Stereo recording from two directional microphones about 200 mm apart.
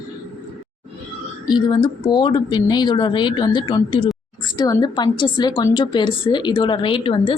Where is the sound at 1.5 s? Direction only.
20° left (ahead or behind).